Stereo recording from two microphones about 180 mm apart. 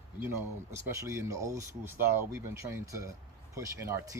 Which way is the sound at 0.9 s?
15° right (ahead or behind).